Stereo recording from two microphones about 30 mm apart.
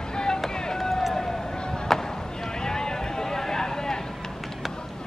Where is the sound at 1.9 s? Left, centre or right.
Centre.